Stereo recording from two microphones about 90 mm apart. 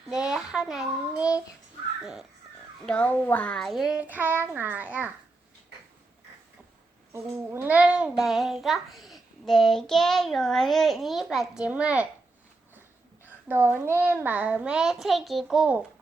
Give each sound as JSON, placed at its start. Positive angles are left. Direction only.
{"t": 0.1, "sound": "child singing", "side_deg": -5}
{"t": 2.8, "sound": "a child's voice", "side_deg": 15}
{"t": 4.0, "sound": "a child's voice", "side_deg": -20}
{"t": 7.1, "sound": "a child's voice", "side_deg": -30}
{"t": 7.7, "sound": "a child's voice", "side_deg": -15}
{"t": 13.2, "sound": "a child's voice", "side_deg": -20}